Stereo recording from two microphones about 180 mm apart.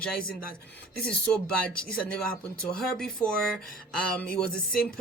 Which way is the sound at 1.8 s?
5° left (ahead or behind).